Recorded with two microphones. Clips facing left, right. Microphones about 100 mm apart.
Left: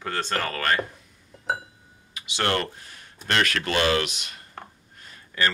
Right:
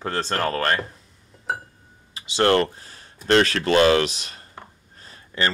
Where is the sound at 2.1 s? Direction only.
30° right (ahead or behind).